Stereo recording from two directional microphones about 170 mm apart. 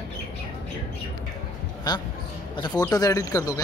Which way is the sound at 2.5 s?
25° left (ahead or behind).